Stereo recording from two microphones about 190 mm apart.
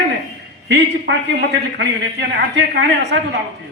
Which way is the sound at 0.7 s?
60° right (ahead or behind).